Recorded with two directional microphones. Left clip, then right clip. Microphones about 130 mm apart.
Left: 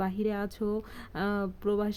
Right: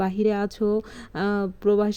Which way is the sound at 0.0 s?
35° right (ahead or behind).